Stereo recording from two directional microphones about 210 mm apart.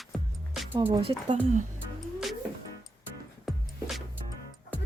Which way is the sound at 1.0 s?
25° right (ahead or behind).